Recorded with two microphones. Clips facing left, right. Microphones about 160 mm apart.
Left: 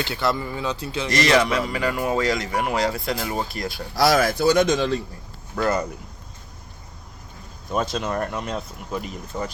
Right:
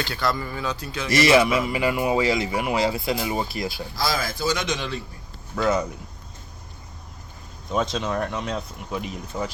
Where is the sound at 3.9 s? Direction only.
70° left (ahead or behind); by 4.9 s 45° left (ahead or behind).